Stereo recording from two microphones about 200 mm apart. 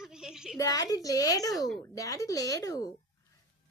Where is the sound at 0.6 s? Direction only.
20° left (ahead or behind).